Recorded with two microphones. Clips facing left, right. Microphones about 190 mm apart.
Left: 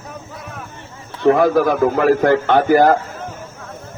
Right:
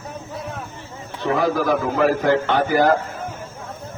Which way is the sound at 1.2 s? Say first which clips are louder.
Left 7 dB; 55° left (ahead or behind).